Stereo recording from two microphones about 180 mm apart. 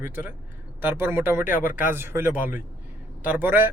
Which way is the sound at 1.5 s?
50° left (ahead or behind).